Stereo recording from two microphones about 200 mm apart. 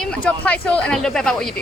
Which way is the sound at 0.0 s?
5° left (ahead or behind).